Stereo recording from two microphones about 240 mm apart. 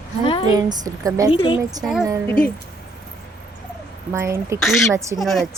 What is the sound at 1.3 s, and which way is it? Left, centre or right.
Speech, left.